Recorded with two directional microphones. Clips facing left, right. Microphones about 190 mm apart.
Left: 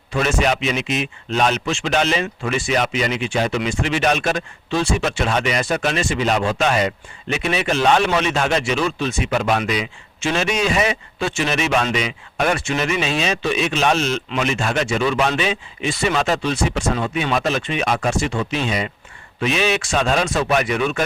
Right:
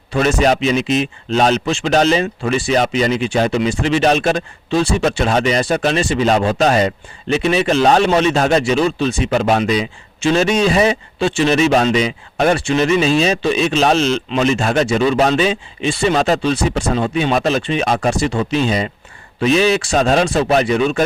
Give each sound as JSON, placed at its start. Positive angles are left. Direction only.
{"t": 0.1, "sound": "a man's voice", "side_deg": -35}